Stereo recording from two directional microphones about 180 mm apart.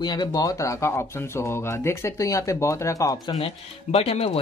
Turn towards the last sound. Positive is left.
turn(degrees=35)  # may be behind; listen again after turning